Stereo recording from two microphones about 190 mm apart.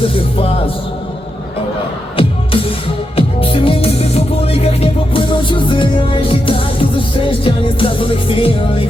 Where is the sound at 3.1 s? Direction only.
30° left (ahead or behind).